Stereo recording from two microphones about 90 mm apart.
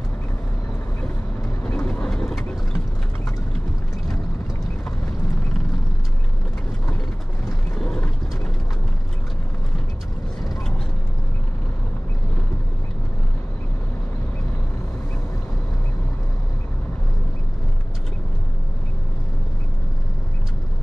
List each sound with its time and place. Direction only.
1.6 s vehicle: 15° left (ahead or behind)
7.7 s mechanisms: 5° left (ahead or behind)